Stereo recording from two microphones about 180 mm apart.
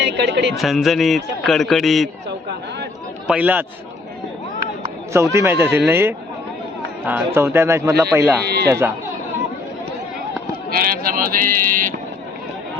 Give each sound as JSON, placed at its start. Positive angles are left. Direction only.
{"t": 0.0, "sound": "speech", "side_deg": -70}
{"t": 0.5, "sound": "speech", "side_deg": 0}
{"t": 3.2, "sound": "a man's voice", "side_deg": -10}
{"t": 5.1, "sound": "a man's voice", "side_deg": -15}
{"t": 10.7, "sound": "speech", "side_deg": -55}